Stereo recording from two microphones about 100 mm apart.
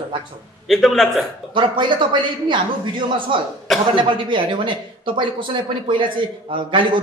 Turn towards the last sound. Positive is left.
turn(degrees=-55)  # may be behind; listen again after turning